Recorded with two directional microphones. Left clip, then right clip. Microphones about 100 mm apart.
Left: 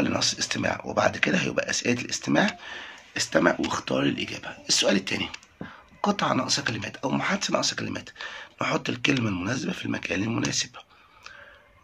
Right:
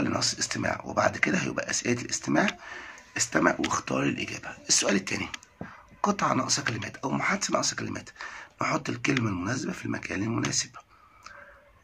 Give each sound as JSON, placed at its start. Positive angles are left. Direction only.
{"t": 0.0, "sound": "speech", "side_deg": 20}